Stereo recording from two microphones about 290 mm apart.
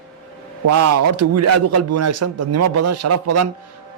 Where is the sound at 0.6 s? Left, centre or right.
Right.